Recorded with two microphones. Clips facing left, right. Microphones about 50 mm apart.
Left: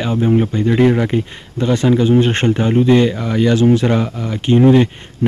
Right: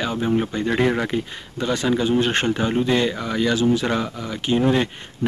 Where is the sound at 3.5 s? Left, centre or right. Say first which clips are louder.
Left 7 dB; left.